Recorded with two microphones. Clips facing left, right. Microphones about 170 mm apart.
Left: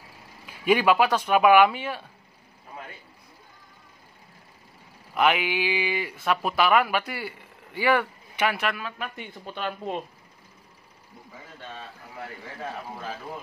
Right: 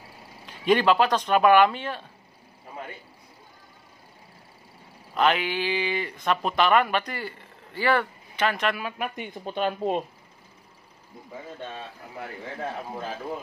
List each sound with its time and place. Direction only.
0.5 s speech: 10° left (ahead or behind)
5.1 s speech: 10° left (ahead or behind)
8.7 s speech: 15° right (ahead or behind)